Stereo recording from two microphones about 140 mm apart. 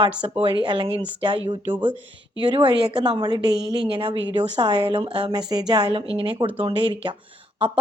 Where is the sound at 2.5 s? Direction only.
35° right (ahead or behind).